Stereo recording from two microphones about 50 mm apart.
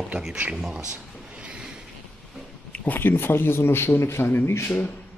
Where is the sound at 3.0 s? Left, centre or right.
Left.